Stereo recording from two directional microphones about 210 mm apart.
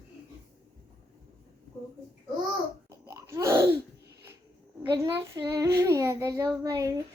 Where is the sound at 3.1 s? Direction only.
15° right (ahead or behind).